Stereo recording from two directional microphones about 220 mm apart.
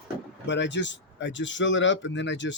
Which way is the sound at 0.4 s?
55° left (ahead or behind).